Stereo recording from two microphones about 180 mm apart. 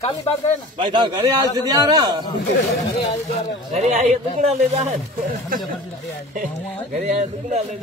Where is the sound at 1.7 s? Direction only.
20° right (ahead or behind).